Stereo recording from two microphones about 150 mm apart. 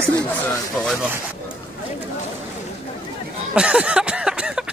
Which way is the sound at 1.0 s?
10° right (ahead or behind).